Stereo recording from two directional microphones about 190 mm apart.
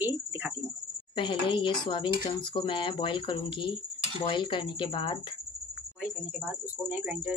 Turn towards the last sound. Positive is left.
turn(degrees=-10)  # may be behind; listen again after turning